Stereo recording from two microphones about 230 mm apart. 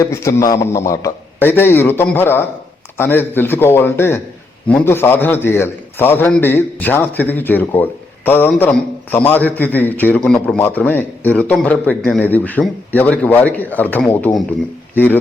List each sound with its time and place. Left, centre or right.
0.1 s a man's voice: centre